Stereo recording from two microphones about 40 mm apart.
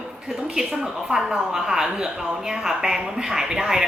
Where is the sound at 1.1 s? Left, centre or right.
Centre.